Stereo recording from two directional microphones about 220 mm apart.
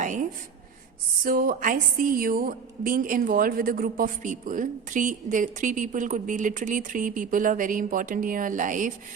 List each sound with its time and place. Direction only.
0.0 s writing: 35° right (ahead or behind)
1.2 s a woman's voice: 40° right (ahead or behind)